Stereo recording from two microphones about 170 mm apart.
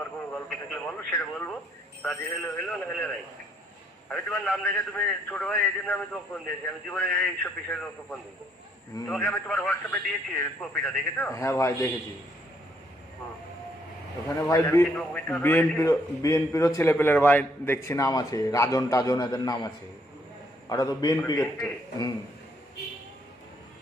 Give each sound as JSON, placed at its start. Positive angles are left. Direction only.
{"t": 0.0, "sound": "radio", "side_deg": 10}
{"t": 2.0, "sound": "a man's voice", "side_deg": 5}
{"t": 4.1, "sound": "a man's voice", "side_deg": 5}
{"t": 14.3, "sound": "a man's voice", "side_deg": 15}
{"t": 14.9, "sound": "a man's voice", "side_deg": 5}